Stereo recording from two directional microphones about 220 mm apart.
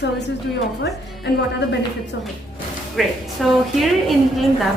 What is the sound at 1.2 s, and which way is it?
Speech, 50° left (ahead or behind).